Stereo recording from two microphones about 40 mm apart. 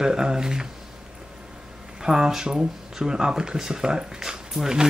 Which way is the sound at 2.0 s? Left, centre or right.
Centre.